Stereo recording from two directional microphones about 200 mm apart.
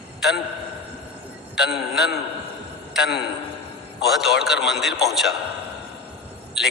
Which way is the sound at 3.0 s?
55° left (ahead or behind).